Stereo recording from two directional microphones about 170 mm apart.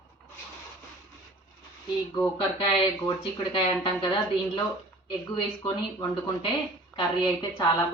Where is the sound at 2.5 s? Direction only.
30° left (ahead or behind).